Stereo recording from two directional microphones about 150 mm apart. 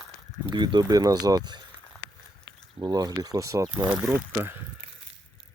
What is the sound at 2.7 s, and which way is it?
Speech, 30° right (ahead or behind).